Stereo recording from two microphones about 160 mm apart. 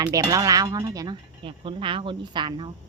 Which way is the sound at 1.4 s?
35° right (ahead or behind).